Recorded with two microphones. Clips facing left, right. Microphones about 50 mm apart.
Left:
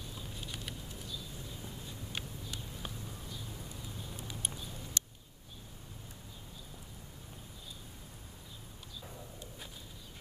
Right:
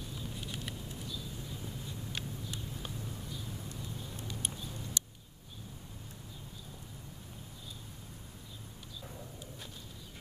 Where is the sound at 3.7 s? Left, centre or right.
Centre.